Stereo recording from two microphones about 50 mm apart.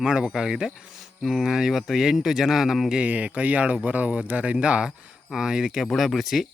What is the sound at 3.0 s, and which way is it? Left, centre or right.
Speech, right.